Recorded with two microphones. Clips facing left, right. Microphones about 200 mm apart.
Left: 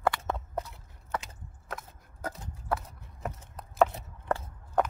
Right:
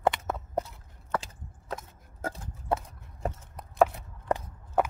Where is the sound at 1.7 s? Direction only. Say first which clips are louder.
Right 3 dB; 25° right (ahead or behind).